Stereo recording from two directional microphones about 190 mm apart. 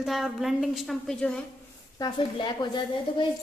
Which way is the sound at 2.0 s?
25° left (ahead or behind).